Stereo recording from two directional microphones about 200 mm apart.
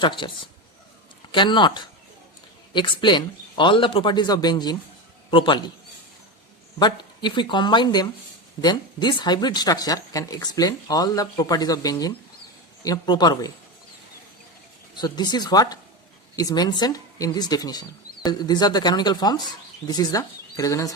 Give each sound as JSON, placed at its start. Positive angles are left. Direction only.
{"t": 0.0, "sound": "speech", "side_deg": 25}
{"t": 1.3, "sound": "speech", "side_deg": 25}
{"t": 6.7, "sound": "speech", "side_deg": 20}
{"t": 14.9, "sound": "speech", "side_deg": 20}